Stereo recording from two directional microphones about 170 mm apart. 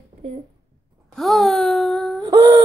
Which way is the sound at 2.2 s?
20° right (ahead or behind).